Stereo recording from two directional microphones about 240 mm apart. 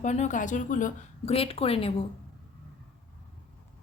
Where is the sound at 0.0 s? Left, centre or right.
Left.